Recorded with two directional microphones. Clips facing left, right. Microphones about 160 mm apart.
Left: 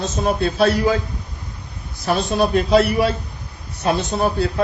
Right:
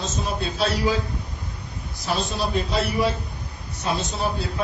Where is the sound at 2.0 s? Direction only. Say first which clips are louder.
Left 7 dB; 55° left (ahead or behind).